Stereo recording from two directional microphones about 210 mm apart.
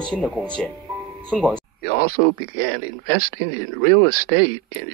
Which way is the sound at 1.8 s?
45° left (ahead or behind).